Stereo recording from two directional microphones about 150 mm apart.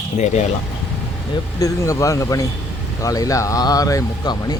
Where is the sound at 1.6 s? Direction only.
20° left (ahead or behind).